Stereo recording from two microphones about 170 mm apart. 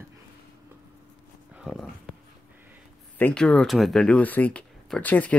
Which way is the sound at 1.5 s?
Centre (ahead or behind).